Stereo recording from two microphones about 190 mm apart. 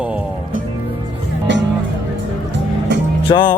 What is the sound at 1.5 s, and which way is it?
Music, 70° right (ahead or behind).